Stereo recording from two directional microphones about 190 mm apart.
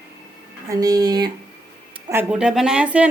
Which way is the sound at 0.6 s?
20° right (ahead or behind).